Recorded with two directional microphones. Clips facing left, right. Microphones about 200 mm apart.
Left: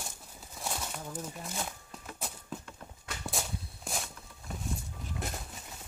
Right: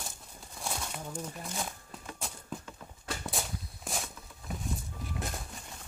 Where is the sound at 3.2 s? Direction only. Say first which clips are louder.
Even; centre (ahead or behind).